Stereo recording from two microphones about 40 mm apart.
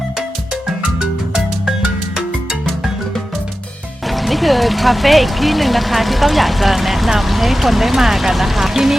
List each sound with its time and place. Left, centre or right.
1.8 s music: right
4.1 s speech: centre